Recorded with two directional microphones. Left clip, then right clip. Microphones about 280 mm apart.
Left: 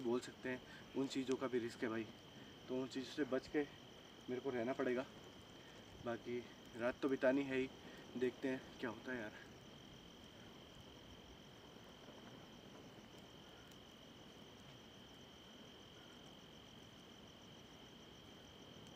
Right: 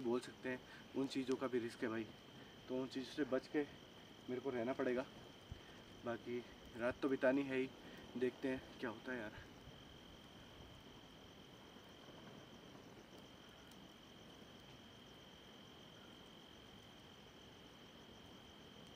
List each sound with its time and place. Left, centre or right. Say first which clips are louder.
0.1 s speech: even; centre
6.0 s speech: even; centre